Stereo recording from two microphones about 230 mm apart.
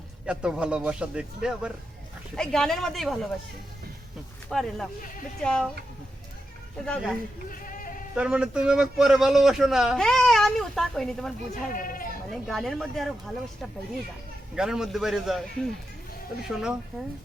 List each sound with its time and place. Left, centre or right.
0.3 s a man's voice: centre
4.4 s a man's voice: centre
6.8 s a man's voice: centre
7.5 s sheep: left
8.1 s a man's voice: centre
11.7 s speech: left
12.3 s a man's voice: centre